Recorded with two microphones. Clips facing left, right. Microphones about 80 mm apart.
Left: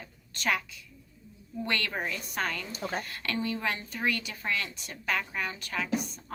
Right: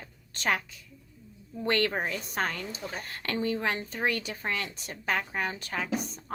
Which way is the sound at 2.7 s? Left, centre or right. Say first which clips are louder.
Left 3 dB; left.